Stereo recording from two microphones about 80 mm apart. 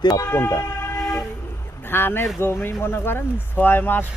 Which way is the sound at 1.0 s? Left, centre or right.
Centre.